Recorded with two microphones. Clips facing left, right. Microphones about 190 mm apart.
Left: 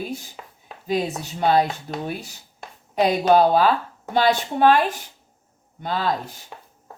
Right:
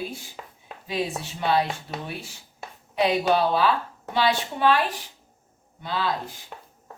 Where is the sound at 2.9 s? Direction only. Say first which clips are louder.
Left 4 dB; 45° left (ahead or behind).